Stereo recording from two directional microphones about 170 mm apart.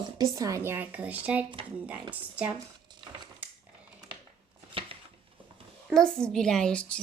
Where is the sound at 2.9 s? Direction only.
25° right (ahead or behind).